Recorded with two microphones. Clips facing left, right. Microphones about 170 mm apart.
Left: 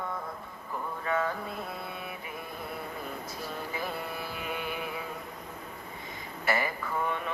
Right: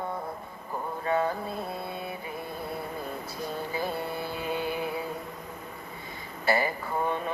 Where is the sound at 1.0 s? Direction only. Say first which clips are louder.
Right 4 dB; 30° right (ahead or behind).